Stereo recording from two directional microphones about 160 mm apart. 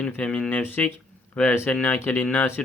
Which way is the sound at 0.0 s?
5° left (ahead or behind).